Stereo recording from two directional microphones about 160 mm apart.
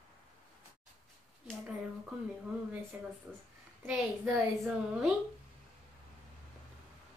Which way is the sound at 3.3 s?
5° right (ahead or behind).